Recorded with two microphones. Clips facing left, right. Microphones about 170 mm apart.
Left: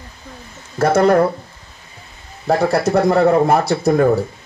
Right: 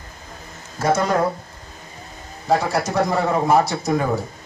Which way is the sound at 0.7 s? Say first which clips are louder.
Left 6 dB; 60° left (ahead or behind).